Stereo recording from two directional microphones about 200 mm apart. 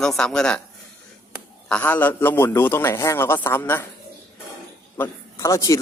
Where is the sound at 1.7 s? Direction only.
5° left (ahead or behind).